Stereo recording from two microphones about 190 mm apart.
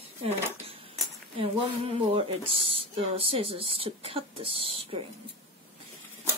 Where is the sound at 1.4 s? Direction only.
30° right (ahead or behind).